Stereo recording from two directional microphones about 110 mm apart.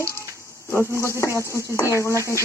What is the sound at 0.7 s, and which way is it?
Speech, 25° left (ahead or behind).